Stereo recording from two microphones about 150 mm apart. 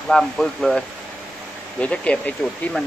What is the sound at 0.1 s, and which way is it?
Speech, 5° left (ahead or behind).